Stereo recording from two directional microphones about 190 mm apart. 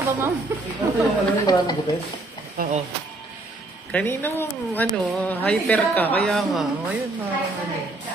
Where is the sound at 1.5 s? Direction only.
20° left (ahead or behind).